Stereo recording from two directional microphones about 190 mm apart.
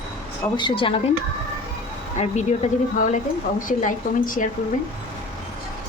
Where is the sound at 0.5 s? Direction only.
25° left (ahead or behind).